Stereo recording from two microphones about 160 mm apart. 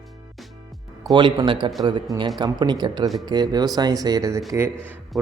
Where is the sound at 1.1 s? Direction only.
30° right (ahead or behind).